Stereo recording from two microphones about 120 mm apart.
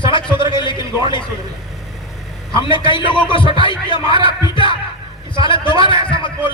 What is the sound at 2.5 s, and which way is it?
A man's voice, 45° left (ahead or behind).